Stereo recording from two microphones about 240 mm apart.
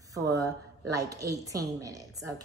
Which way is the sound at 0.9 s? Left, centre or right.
Centre.